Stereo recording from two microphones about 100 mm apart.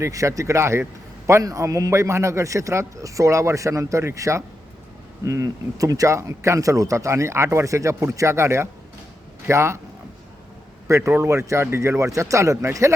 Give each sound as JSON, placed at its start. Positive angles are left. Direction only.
{"t": 0.0, "sound": "speech", "side_deg": -30}
{"t": 10.8, "sound": "speech", "side_deg": -30}